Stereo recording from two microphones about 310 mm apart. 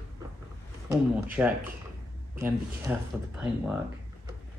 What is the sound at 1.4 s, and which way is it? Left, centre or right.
Speech, centre.